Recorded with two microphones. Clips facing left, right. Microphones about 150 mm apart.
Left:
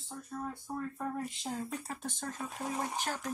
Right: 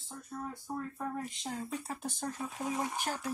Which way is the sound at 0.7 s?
10° right (ahead or behind).